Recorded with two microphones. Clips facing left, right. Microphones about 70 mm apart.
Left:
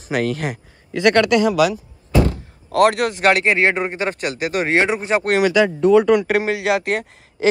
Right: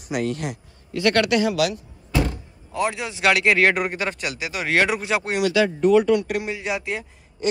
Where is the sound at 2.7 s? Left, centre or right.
Left.